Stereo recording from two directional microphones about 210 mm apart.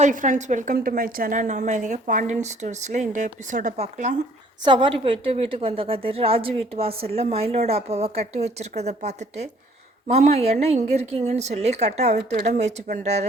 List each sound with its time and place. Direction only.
0.0 s a woman's voice: 40° right (ahead or behind)
4.6 s a woman's voice: 25° right (ahead or behind)